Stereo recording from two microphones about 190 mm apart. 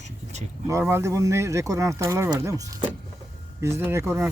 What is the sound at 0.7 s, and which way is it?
Speech, 15° right (ahead or behind).